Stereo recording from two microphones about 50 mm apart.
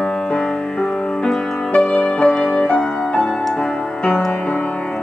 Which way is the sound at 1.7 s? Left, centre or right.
Left.